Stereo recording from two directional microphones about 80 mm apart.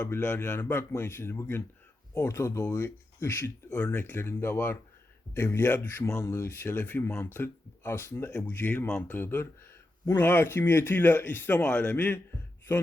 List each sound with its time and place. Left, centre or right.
0.0 s a man's voice: left
6.1 s speech: left
8.4 s a man's voice: left
11.6 s a man's voice: centre